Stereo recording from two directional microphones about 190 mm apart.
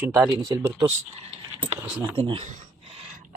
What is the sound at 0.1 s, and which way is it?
Speech, 15° right (ahead or behind).